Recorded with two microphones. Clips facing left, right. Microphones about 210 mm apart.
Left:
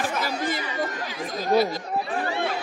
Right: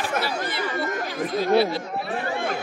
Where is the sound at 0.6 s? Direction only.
50° right (ahead or behind).